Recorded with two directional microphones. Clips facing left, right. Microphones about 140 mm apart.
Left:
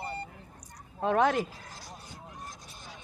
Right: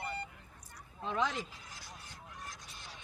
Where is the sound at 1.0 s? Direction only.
60° left (ahead or behind).